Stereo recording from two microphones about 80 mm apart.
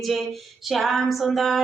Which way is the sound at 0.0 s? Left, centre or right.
Centre.